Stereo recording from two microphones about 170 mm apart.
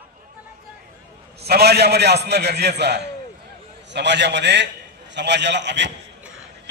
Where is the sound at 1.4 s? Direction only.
70° right (ahead or behind).